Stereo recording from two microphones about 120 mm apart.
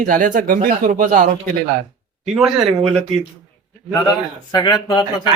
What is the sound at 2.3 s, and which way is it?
Speech, 5° right (ahead or behind).